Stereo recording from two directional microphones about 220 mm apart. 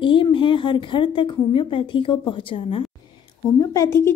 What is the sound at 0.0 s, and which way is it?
A woman's voice, 20° left (ahead or behind).